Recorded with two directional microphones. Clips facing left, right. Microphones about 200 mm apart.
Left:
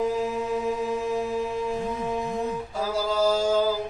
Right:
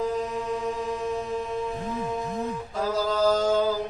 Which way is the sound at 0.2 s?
5° left (ahead or behind).